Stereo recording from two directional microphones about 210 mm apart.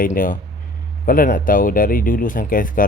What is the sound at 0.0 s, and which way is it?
A man's voice, 40° left (ahead or behind).